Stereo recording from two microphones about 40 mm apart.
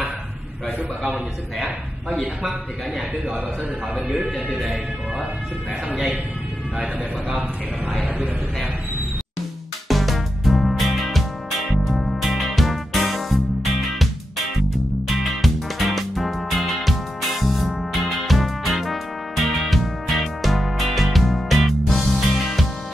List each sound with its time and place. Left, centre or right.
2.0 s speech: centre
6.8 s speech: right
9.8 s music: centre
15.0 s music: centre